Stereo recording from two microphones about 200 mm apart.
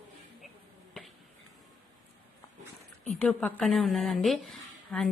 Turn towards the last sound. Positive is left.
turn(degrees=0)  # may be behind; listen again after turning